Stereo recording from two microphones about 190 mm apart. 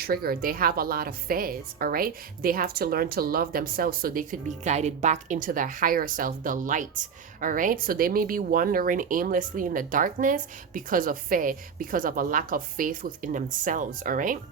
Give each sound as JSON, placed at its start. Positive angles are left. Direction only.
{"t": 0.0, "sound": "a woman's voice", "side_deg": -55}